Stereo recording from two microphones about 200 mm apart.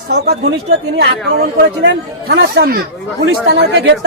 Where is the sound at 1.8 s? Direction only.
60° right (ahead or behind).